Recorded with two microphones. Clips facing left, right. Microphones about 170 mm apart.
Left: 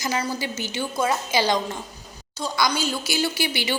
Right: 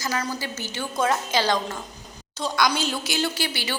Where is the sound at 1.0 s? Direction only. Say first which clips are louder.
Even; 5° left (ahead or behind).